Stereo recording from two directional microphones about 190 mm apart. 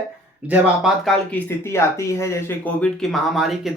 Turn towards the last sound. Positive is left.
turn(degrees=0)  # may be behind; listen again after turning